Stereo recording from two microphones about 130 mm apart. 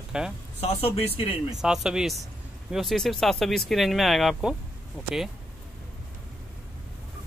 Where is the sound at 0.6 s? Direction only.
50° left (ahead or behind).